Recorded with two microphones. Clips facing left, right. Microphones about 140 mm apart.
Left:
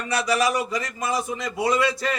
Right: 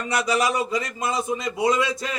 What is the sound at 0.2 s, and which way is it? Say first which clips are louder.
A man's voice: even; 20° right (ahead or behind).